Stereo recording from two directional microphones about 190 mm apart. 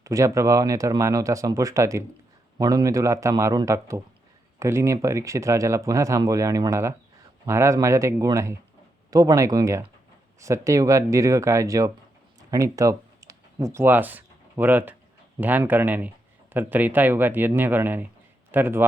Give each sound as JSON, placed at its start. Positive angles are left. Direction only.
{"t": 0.0, "sound": "speech", "side_deg": -15}